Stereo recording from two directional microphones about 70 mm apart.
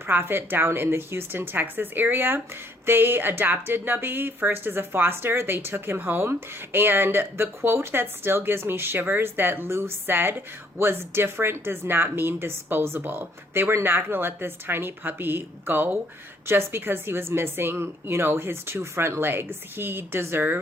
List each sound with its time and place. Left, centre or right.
0.1 s speech: right